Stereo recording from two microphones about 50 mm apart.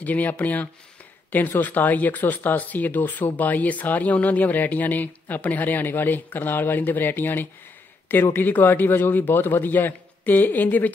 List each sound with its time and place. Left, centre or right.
0.0 s speech: left